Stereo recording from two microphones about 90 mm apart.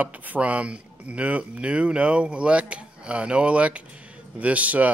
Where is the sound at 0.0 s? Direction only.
15° right (ahead or behind).